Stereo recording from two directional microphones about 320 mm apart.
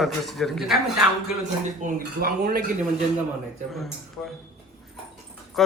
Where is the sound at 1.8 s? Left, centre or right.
Right.